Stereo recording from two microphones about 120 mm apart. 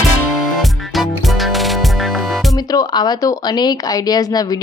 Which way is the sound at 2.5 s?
30° left (ahead or behind).